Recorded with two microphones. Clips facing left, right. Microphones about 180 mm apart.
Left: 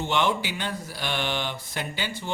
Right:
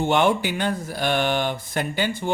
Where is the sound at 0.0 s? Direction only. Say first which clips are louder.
Right 6 dB; 50° right (ahead or behind).